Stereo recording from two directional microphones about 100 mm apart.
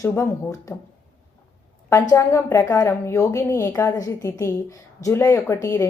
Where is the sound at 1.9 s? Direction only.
30° left (ahead or behind).